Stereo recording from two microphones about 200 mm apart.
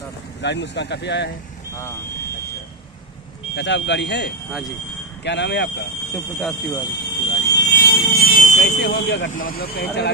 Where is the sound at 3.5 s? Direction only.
60° left (ahead or behind).